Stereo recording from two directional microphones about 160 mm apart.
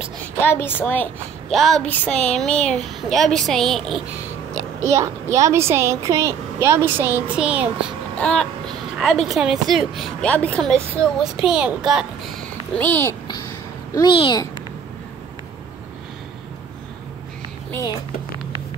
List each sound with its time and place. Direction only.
0.4 s a woman's voice: 15° left (ahead or behind)
1.5 s speech: centre (ahead or behind)
4.8 s a woman's voice: 20° right (ahead or behind)
8.2 s speech: 5° left (ahead or behind)
12.7 s a woman's voice: 10° left (ahead or behind)
13.9 s a child's voice: 30° left (ahead or behind)